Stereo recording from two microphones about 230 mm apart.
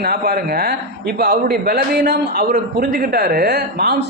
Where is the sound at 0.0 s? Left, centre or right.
Right.